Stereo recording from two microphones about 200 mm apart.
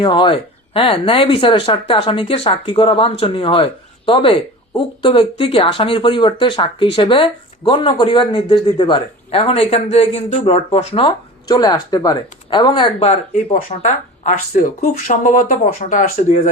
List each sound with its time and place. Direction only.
0.0 s speech: 25° left (ahead or behind)